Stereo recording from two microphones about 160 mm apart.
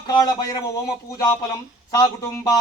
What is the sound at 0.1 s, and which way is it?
Speech, 25° left (ahead or behind).